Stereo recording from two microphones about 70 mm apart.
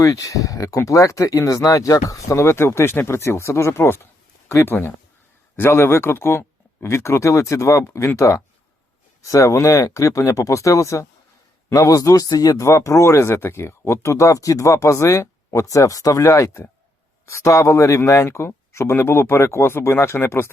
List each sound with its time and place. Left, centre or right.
0.0 s a man's voice: left
12.6 s speech: left